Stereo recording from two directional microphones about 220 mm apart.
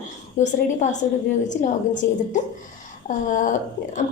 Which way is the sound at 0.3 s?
35° left (ahead or behind).